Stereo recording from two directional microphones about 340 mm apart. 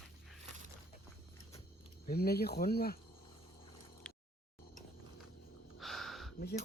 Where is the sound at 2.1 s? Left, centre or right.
Left.